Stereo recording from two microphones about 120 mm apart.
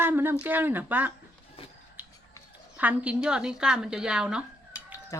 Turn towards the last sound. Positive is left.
turn(degrees=25)  # may be behind; listen again after turning